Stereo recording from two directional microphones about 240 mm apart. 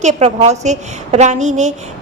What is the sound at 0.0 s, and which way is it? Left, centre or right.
A woman's voice, right.